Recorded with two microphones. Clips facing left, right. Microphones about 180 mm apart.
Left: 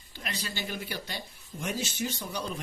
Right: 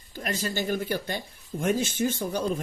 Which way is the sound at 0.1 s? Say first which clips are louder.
Right 8 dB; 45° right (ahead or behind).